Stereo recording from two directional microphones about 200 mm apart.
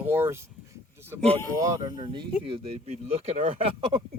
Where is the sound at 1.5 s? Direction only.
15° right (ahead or behind).